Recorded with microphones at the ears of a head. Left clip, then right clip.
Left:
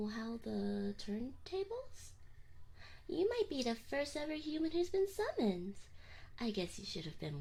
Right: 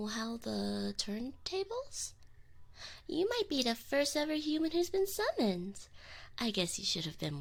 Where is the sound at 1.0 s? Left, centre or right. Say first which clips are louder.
Right 6 dB; right.